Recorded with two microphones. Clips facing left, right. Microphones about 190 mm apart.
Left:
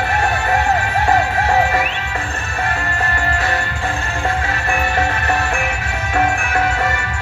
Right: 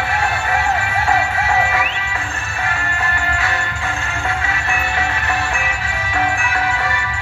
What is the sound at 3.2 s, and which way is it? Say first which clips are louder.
Music: left 2 dB; 35° left (ahead or behind).